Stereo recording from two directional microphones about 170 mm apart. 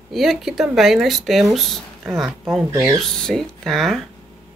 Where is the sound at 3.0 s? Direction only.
5° left (ahead or behind).